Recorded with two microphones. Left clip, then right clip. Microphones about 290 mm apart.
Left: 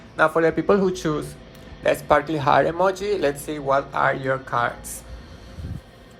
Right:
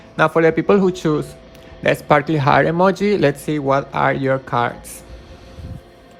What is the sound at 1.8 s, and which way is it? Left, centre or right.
Speech, right.